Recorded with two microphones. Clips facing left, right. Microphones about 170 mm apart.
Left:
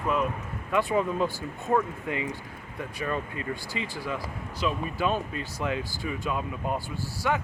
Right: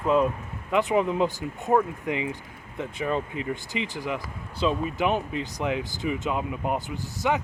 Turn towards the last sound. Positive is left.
turn(degrees=-20)  # may be behind; listen again after turning